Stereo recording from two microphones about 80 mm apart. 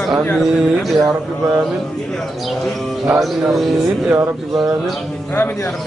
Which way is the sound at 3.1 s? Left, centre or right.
Centre.